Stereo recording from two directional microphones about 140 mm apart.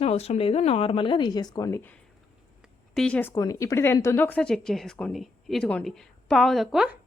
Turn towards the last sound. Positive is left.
turn(degrees=-5)  # may be behind; listen again after turning